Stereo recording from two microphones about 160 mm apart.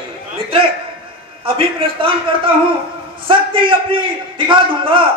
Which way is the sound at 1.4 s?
35° right (ahead or behind).